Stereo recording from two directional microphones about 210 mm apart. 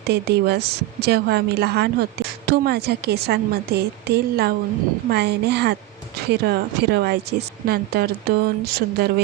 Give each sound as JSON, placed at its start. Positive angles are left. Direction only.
{"t": 0.1, "sound": "a woman's voice", "side_deg": -50}